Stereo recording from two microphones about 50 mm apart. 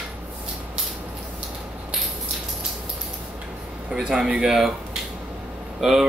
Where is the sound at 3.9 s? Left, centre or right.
Centre.